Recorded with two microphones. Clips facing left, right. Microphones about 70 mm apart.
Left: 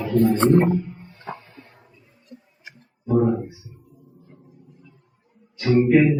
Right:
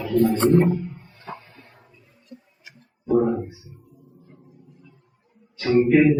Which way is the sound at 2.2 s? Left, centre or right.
Left.